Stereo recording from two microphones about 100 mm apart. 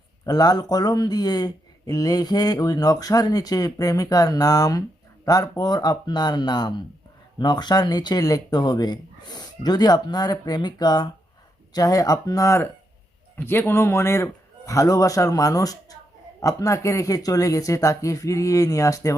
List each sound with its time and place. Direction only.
0.3 s speech: 40° left (ahead or behind)
13.3 s speech: 20° left (ahead or behind)